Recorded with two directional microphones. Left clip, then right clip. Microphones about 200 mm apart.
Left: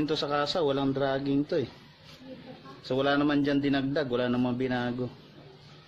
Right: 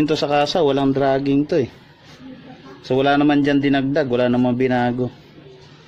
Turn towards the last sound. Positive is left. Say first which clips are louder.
# right 12 dB
turn(degrees=-30)  # may be behind; listen again after turning